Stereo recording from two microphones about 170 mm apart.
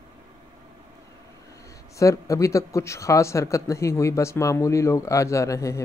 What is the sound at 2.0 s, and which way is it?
A man's voice, 20° left (ahead or behind).